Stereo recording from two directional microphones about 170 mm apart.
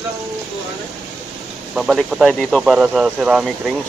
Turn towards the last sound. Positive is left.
turn(degrees=0)  # may be behind; listen again after turning